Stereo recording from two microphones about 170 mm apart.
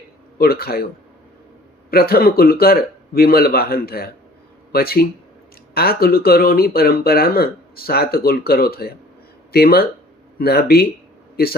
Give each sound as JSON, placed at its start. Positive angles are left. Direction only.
{"t": 0.3, "sound": "speech", "side_deg": 60}
{"t": 1.9, "sound": "speech", "side_deg": 65}